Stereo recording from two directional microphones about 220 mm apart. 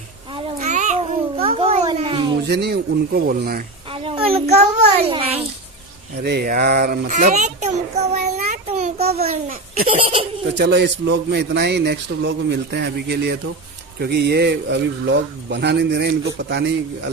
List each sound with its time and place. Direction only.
0.3 s cat: 30° right (ahead or behind)
1.6 s a sound: 25° right (ahead or behind)
2.4 s speech: 50° right (ahead or behind)
3.9 s a sound: 25° right (ahead or behind)
6.2 s child singing: 45° right (ahead or behind); by 9.4 s 30° right (ahead or behind)
10.6 s speech: 50° right (ahead or behind)